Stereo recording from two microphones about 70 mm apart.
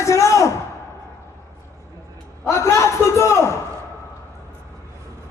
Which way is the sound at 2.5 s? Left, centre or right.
Left.